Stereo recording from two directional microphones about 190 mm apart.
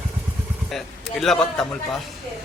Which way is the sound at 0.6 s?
Centre (ahead or behind).